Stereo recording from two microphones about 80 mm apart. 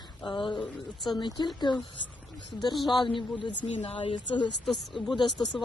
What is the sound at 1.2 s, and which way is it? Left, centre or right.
Speech, left.